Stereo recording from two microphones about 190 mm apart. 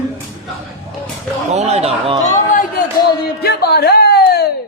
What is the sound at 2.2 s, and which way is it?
Chatter, 40° left (ahead or behind).